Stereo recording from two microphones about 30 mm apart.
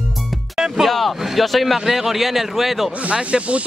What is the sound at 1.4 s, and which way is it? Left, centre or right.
A man's voice, centre.